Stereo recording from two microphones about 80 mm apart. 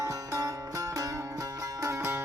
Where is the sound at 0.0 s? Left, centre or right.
Right.